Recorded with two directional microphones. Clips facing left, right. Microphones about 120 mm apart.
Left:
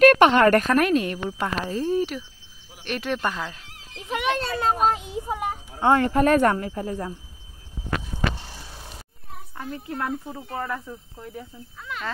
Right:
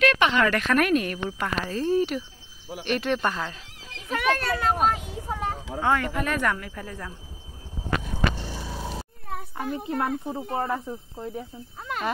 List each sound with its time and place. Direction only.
0.0 s speech: 50° left (ahead or behind)
0.8 s speech: 25° left (ahead or behind)
2.0 s speech: centre (ahead or behind)
4.1 s children playing: 20° left (ahead or behind)
4.8 s a sound: 25° left (ahead or behind)
5.8 s speech: 30° left (ahead or behind)
8.9 s a sound: 90° right
9.8 s speech: 20° right (ahead or behind)